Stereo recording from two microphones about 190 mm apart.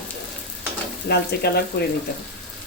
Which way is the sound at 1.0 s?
60° left (ahead or behind).